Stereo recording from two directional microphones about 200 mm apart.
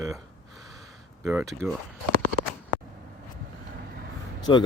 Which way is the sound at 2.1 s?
50° right (ahead or behind).